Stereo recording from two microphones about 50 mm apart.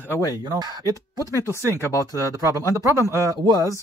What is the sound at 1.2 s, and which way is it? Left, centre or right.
Speech, left.